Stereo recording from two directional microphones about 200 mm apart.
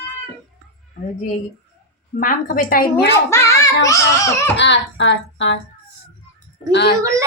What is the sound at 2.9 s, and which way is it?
A child's voice, 15° left (ahead or behind).